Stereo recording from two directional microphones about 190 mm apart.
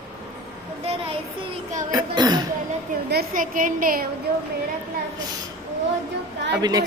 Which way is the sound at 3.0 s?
50° right (ahead or behind).